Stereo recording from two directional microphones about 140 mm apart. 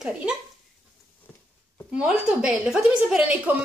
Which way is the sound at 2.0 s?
5° right (ahead or behind).